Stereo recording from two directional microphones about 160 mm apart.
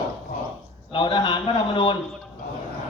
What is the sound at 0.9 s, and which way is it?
A man's voice, 30° left (ahead or behind).